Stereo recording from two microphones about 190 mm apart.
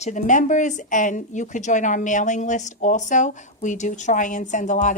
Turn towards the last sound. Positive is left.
turn(degrees=40)  # may be behind; listen again after turning